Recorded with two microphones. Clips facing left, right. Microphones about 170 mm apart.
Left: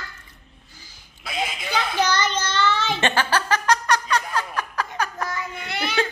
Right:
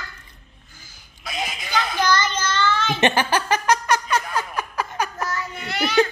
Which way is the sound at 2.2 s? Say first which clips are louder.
Even; 25° left (ahead or behind).